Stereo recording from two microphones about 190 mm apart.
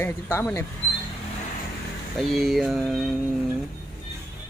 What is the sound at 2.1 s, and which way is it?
Speech, centre (ahead or behind).